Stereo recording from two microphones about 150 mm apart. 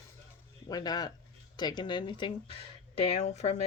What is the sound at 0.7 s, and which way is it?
Speech, 25° left (ahead or behind).